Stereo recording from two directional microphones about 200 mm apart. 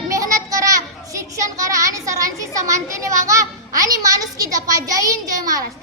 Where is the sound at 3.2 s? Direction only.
15° right (ahead or behind).